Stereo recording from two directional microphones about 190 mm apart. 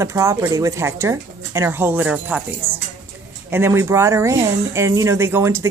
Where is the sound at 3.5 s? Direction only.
15° right (ahead or behind).